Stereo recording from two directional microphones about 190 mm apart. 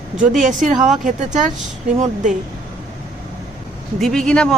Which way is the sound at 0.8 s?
40° right (ahead or behind).